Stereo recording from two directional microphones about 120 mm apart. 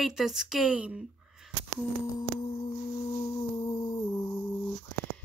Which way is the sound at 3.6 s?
35° left (ahead or behind).